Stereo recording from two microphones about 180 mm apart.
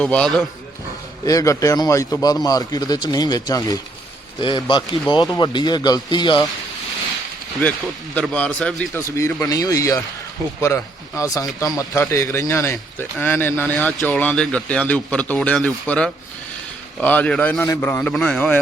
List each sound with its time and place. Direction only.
0.0 s a man's voice: 5° left (ahead or behind)
1.2 s speech: 20° left (ahead or behind)
8.1 s a man's voice: 5° left (ahead or behind)
9.0 s a man's voice: 15° left (ahead or behind)